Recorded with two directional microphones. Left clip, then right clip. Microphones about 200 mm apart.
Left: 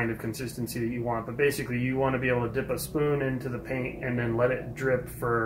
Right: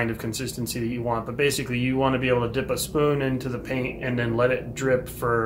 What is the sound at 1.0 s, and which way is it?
Speech, 10° right (ahead or behind).